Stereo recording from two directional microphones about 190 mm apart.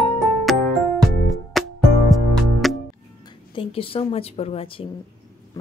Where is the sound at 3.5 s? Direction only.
30° left (ahead or behind).